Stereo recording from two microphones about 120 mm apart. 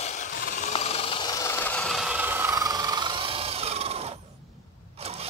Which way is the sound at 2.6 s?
30° right (ahead or behind).